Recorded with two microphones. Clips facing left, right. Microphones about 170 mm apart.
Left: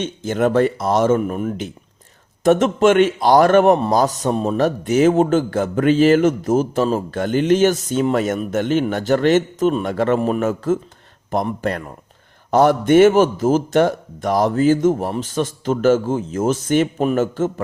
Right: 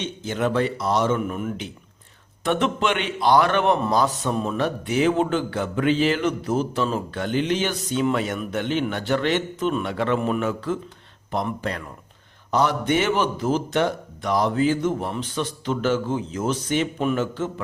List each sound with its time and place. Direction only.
0.0 s a man's voice: 50° left (ahead or behind)